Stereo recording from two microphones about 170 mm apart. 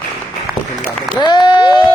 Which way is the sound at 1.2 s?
25° left (ahead or behind).